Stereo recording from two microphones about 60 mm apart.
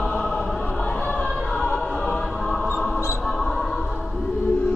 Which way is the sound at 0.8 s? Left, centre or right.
Centre.